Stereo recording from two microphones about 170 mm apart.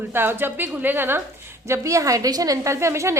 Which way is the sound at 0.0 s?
15° right (ahead or behind).